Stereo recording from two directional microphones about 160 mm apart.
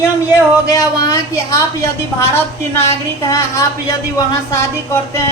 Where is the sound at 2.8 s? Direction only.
20° left (ahead or behind).